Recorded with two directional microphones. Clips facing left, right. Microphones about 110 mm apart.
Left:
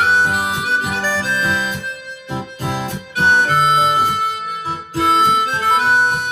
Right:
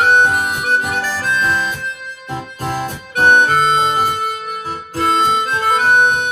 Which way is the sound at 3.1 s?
50° right (ahead or behind).